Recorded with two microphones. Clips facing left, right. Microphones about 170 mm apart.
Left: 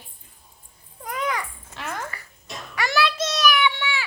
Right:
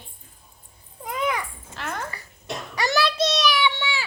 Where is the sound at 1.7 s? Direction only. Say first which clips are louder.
Right 1 dB; centre (ahead or behind).